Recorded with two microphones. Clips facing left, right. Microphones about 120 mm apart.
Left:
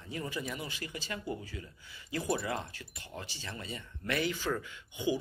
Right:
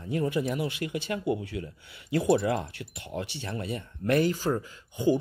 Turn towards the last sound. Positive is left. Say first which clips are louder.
# right 8 dB
turn(degrees=-40)  # may be behind; listen again after turning